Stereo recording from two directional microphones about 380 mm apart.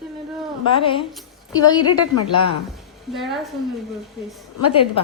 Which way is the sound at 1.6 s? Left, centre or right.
Centre.